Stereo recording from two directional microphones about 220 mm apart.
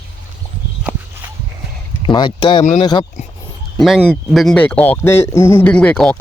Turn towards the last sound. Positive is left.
turn(degrees=5)  # may be behind; listen again after turning